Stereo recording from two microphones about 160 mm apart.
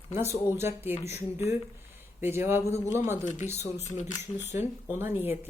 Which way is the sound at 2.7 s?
45° left (ahead or behind).